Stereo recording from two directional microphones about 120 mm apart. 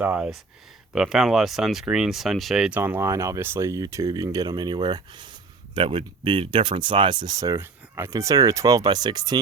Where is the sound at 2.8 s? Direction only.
20° right (ahead or behind).